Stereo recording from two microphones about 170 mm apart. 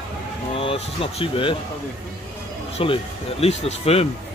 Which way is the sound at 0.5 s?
35° left (ahead or behind).